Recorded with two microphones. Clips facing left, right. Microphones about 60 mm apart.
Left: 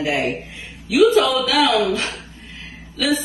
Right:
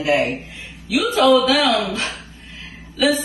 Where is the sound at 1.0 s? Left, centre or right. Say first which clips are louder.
Even; centre.